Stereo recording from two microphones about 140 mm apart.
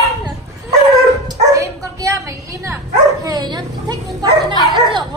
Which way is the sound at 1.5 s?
25° right (ahead or behind).